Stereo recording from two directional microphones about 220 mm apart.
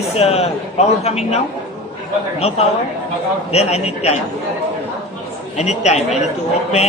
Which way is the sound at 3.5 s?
30° left (ahead or behind).